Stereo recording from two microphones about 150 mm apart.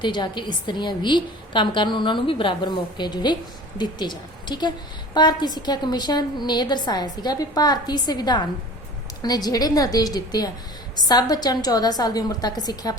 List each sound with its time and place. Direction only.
0.0 s a woman's voice: 30° left (ahead or behind)